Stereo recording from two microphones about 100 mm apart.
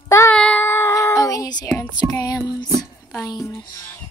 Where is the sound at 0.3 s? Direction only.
10° left (ahead or behind).